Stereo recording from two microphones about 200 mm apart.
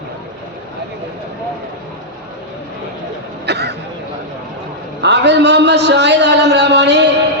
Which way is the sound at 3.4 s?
55° right (ahead or behind).